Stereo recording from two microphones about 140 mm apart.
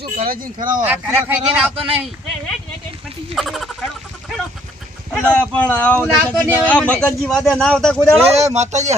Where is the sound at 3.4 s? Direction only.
Centre (ahead or behind).